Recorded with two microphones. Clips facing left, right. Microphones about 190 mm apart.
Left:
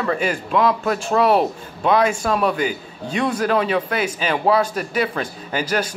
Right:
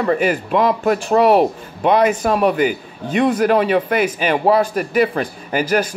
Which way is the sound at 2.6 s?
55° right (ahead or behind).